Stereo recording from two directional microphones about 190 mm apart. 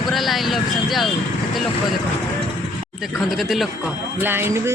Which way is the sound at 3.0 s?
Centre (ahead or behind).